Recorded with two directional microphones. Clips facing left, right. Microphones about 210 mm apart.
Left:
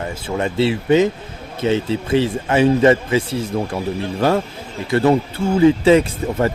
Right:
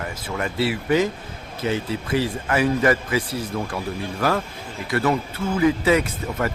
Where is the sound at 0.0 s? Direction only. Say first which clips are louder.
Left 6 dB; 25° left (ahead or behind).